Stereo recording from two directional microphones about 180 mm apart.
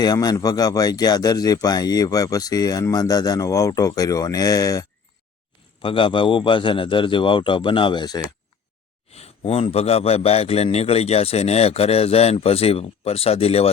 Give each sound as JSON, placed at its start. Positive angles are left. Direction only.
{"t": 0.0, "sound": "speech", "side_deg": 20}
{"t": 9.1, "sound": "a man's voice", "side_deg": 35}